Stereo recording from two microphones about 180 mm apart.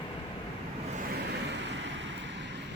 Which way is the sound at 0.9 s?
60° right (ahead or behind).